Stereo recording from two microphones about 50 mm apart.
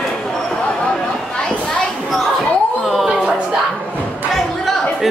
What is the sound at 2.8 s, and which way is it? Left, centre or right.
Music, centre.